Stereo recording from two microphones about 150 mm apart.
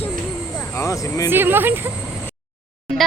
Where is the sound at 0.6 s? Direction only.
20° left (ahead or behind).